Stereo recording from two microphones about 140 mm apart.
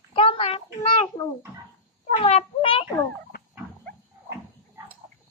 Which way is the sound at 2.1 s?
45° left (ahead or behind).